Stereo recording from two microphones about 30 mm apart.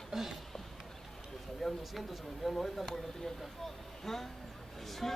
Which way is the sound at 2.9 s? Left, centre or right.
Centre.